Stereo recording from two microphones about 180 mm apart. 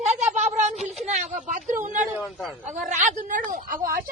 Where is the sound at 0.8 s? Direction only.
40° right (ahead or behind).